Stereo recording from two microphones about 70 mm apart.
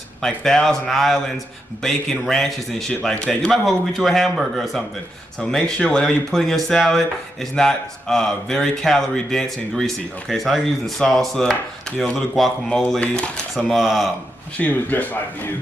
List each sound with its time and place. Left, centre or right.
0.2 s speech: centre
5.4 s speech: centre
13.0 s speech: centre
13.6 s speech: centre
14.6 s speech: left